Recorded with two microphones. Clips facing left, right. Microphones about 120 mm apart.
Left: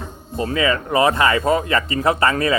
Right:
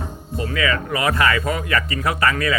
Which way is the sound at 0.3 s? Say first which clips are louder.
Left 3 dB; 30° left (ahead or behind).